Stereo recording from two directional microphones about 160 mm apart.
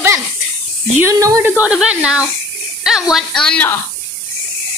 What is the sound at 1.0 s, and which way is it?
A woman's voice, 15° right (ahead or behind).